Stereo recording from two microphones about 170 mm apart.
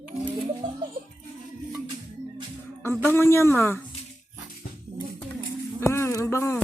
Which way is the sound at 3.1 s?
15° left (ahead or behind).